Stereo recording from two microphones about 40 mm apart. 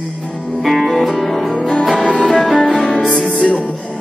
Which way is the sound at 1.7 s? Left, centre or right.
Centre.